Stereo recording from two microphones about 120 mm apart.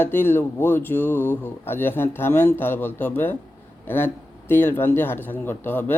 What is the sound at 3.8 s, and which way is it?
Mantra, 20° left (ahead or behind).